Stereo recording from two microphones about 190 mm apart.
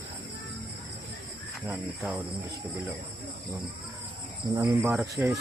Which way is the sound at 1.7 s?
5° right (ahead or behind).